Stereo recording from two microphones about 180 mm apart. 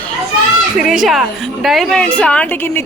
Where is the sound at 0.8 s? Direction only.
Centre (ahead or behind).